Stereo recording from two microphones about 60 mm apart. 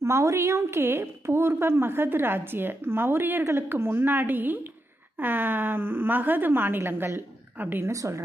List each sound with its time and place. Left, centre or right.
0.0 s a woman's voice: right
7.9 s a woman's voice: right